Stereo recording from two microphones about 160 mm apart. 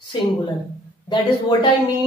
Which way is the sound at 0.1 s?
30° left (ahead or behind).